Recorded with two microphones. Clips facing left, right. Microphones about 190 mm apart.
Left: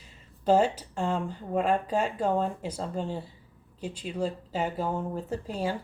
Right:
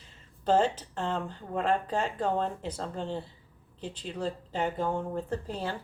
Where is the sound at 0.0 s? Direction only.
10° left (ahead or behind).